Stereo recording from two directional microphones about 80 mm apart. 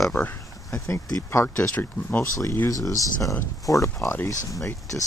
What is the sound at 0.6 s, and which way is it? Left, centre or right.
Speech, left.